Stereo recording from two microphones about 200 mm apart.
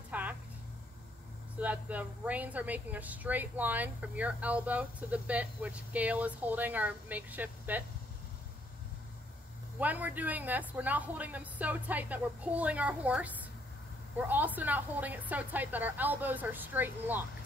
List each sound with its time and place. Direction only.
0.1 s a sound: 10° right (ahead or behind)
1.6 s speech: 10° right (ahead or behind)
9.8 s speech: 10° right (ahead or behind)